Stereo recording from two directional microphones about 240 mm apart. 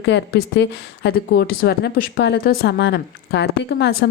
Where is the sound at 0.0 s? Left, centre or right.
Left.